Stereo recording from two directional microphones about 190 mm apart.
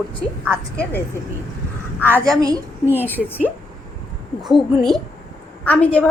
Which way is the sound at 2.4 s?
15° right (ahead or behind).